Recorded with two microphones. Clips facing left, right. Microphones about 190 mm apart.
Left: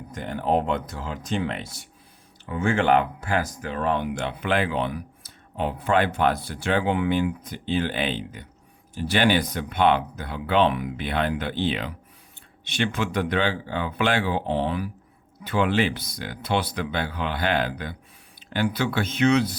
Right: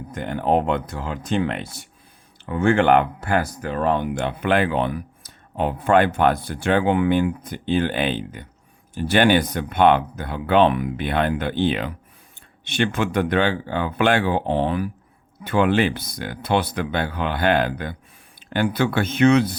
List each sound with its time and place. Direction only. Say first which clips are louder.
0.1 s speech: right 3 dB; 60° right (ahead or behind)